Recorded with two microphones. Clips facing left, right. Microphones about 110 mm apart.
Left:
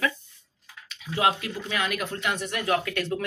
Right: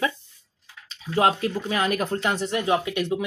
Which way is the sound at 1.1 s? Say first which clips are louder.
Right 4 dB; 35° right (ahead or behind).